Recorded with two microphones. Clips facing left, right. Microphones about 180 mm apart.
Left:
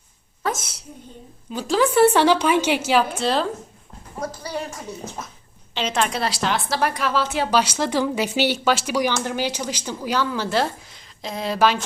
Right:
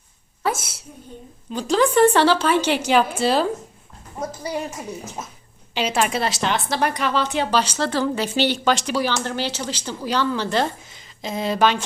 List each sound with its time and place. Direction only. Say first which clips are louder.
0.4 s a woman's voice: right 2 dB; 10° right (ahead or behind)
1.5 s speech: right 1 dB; 5° left (ahead or behind)
4.2 s a woman's voice: right 2 dB; 20° right (ahead or behind); by 11.8 s centre (ahead or behind)